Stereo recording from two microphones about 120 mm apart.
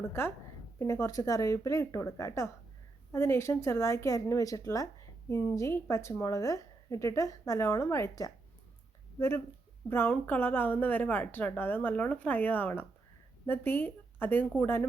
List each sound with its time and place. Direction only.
0.1 s a woman's voice: 20° left (ahead or behind)